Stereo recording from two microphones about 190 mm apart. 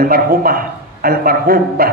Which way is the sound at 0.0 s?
50° right (ahead or behind).